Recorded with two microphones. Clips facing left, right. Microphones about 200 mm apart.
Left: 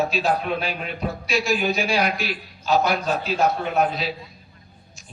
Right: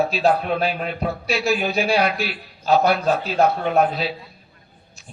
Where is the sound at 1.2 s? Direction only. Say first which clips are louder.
Even; 35° right (ahead or behind).